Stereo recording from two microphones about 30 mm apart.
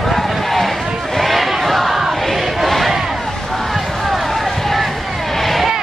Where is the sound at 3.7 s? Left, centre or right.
Centre.